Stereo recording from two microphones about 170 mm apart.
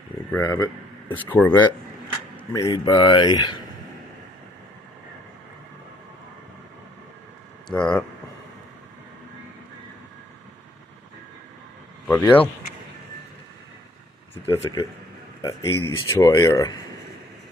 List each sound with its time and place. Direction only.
0.4 s speech: 25° left (ahead or behind)
1.1 s speech: 10° left (ahead or behind)
2.5 s speech: 25° left (ahead or behind)
7.6 s speech: 5° left (ahead or behind)
12.1 s speech: 10° left (ahead or behind)
14.5 s speech: 15° left (ahead or behind)